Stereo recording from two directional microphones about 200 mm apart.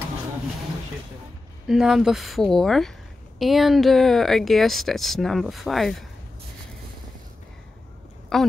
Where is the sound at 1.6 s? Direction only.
Centre (ahead or behind).